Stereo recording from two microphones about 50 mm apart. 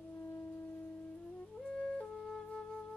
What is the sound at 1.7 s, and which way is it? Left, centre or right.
Music, centre.